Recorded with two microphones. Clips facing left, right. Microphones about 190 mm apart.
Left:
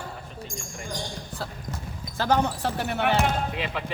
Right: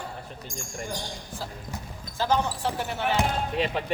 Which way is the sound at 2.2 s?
65° left (ahead or behind).